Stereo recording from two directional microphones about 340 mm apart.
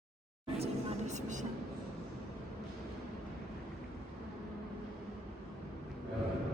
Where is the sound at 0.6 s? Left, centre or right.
Right.